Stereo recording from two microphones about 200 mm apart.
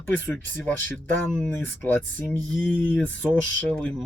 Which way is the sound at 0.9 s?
5° left (ahead or behind).